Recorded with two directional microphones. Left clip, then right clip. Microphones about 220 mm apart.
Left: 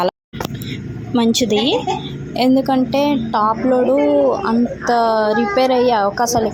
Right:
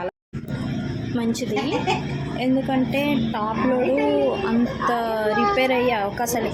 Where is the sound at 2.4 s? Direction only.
25° left (ahead or behind).